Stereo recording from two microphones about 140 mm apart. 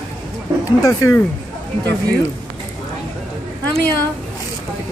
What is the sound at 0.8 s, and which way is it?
Speech, 25° left (ahead or behind).